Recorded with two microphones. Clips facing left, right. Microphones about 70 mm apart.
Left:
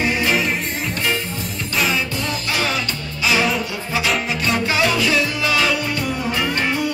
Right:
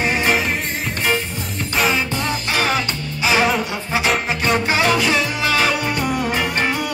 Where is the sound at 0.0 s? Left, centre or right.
Right.